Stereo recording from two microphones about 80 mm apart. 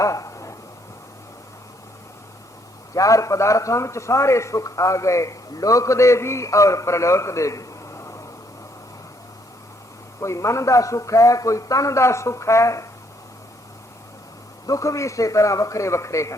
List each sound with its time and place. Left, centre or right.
0.0 s a sound: left
2.9 s a man's voice: left
10.2 s a man's voice: left
14.7 s a man's voice: left